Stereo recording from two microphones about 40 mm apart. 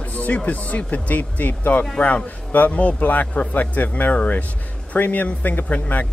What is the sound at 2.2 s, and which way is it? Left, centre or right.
Speech, left.